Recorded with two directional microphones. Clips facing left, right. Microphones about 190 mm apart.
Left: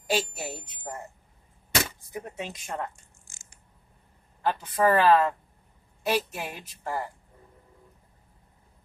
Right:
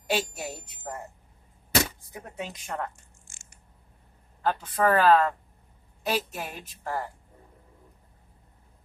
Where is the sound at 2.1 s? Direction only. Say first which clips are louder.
Left 2 dB; 10° left (ahead or behind).